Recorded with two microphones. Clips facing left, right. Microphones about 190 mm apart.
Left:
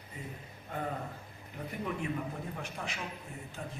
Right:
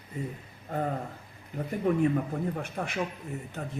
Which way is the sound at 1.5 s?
45° right (ahead or behind).